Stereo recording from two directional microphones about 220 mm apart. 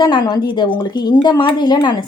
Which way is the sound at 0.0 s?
20° left (ahead or behind).